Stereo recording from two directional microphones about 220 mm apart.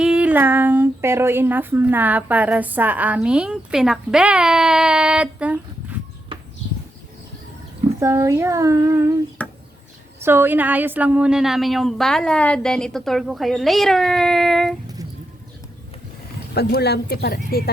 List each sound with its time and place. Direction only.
0.0 s speech: 5° right (ahead or behind)
7.9 s speech: 15° right (ahead or behind)
9.4 s a sound: 5° left (ahead or behind)
10.2 s a woman's voice: 10° right (ahead or behind)
16.6 s speech: 45° left (ahead or behind)